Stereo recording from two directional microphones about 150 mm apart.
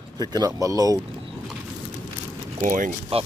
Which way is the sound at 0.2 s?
25° right (ahead or behind).